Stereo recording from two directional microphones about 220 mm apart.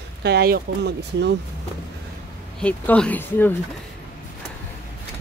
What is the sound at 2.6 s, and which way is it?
Speech, 5° left (ahead or behind).